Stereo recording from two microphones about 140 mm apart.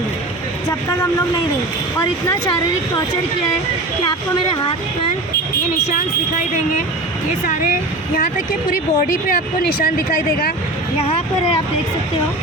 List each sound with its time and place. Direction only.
7.4 s speech: 80° left
10.9 s speech: 45° left (ahead or behind)